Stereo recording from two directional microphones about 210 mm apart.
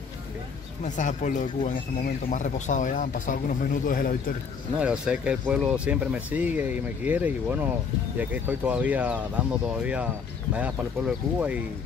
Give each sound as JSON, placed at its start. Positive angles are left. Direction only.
{"t": 0.8, "sound": "speech", "side_deg": 35}
{"t": 4.7, "sound": "speech", "side_deg": -5}